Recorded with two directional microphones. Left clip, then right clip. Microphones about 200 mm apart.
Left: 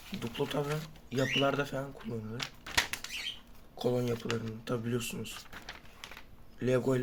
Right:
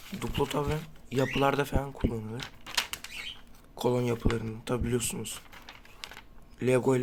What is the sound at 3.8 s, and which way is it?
Speech, 30° right (ahead or behind).